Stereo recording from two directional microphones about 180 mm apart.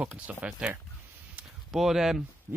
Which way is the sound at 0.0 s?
10° right (ahead or behind).